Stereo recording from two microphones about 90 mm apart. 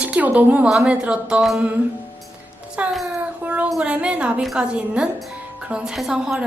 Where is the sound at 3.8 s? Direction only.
10° right (ahead or behind).